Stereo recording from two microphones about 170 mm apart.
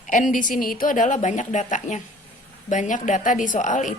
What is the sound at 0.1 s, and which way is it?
A woman's voice, 50° left (ahead or behind).